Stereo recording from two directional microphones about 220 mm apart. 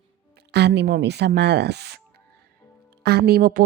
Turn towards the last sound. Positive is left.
turn(degrees=-40)  # may be behind; listen again after turning